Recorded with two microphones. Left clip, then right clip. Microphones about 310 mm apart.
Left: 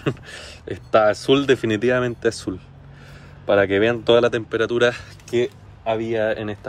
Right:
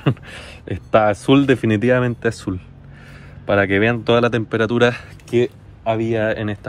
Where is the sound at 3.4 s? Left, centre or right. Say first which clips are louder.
Right 1 dB; centre.